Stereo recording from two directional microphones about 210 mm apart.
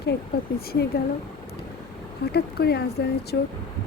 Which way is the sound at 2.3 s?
50° left (ahead or behind).